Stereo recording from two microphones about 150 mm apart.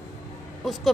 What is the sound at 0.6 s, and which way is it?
Speech, centre (ahead or behind).